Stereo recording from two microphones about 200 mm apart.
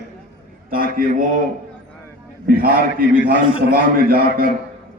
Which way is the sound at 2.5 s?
45° right (ahead or behind).